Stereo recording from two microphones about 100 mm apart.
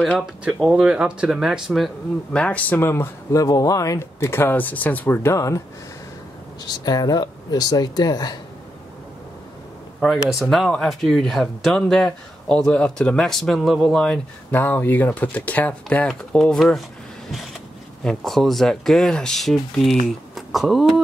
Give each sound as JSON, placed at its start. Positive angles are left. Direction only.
{"t": 0.7, "sound": "speech", "side_deg": -10}
{"t": 2.3, "sound": "speech", "side_deg": 15}
{"t": 2.9, "sound": "speech", "side_deg": 30}
{"t": 6.6, "sound": "speech", "side_deg": 40}
{"t": 9.9, "sound": "speech", "side_deg": -5}
{"t": 14.5, "sound": "speech", "side_deg": 20}
{"t": 16.1, "sound": "speech", "side_deg": 5}
{"t": 18.0, "sound": "speech", "side_deg": 0}